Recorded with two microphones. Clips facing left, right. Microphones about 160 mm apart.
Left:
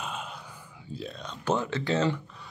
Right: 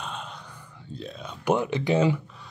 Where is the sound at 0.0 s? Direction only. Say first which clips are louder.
Even; 5° left (ahead or behind).